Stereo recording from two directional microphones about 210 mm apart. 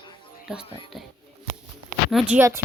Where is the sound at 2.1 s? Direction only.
5° right (ahead or behind).